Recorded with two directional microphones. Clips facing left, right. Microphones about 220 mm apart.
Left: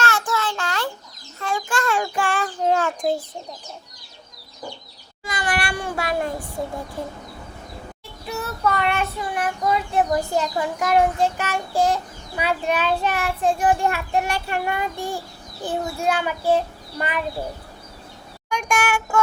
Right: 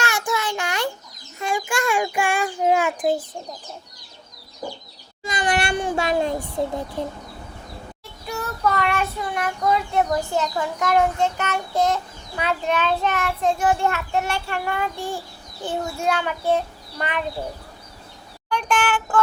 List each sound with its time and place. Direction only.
0.0 s child singing: 15° right (ahead or behind)
1.4 s a child's voice: 15° right (ahead or behind)
5.2 s a child's voice: 20° right (ahead or behind)
8.4 s child singing: 5° left (ahead or behind)
18.4 s child singing: 10° left (ahead or behind)